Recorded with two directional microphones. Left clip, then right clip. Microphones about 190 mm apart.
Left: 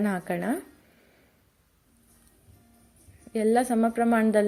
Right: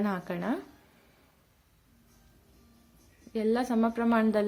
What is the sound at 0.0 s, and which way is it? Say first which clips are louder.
Speech: left 4 dB; 15° left (ahead or behind).